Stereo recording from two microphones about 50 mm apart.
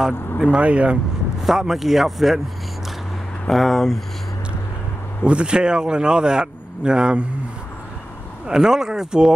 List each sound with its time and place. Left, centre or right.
0.4 s speech: right
1.4 s speech: centre
3.4 s speech: centre
5.2 s speech: right
8.5 s speech: centre